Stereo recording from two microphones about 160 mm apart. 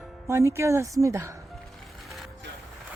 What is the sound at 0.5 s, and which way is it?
Speech, 15° right (ahead or behind).